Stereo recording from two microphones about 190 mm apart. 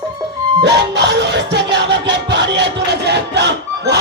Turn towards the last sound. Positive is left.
turn(degrees=-65)  # may be behind; listen again after turning